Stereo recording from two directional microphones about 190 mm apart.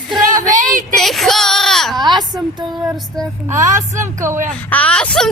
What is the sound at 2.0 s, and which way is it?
Speech, 20° right (ahead or behind).